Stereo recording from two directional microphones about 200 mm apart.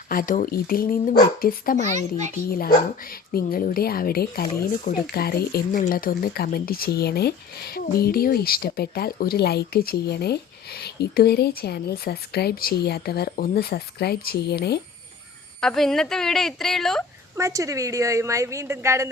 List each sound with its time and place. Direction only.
0.1 s speech: 45° left (ahead or behind)
2.0 s a child's voice: 35° right (ahead or behind)
2.5 s speech: 45° left (ahead or behind)
15.6 s a woman's voice: centre (ahead or behind)
17.3 s speech: 15° right (ahead or behind)